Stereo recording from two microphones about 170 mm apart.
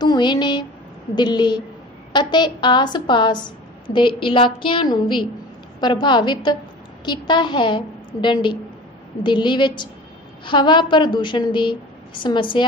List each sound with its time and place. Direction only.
0.0 s a woman's voice: 25° left (ahead or behind)